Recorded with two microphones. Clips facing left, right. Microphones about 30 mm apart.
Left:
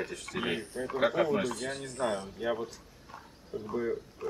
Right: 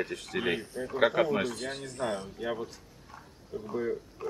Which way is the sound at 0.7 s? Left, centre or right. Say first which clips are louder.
Even; centre.